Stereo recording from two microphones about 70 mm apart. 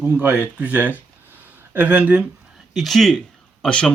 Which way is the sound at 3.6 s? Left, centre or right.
Centre.